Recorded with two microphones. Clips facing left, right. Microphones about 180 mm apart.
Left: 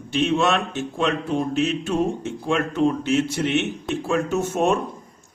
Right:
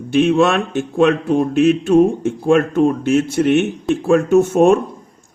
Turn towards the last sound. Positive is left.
turn(degrees=-50)  # may be behind; listen again after turning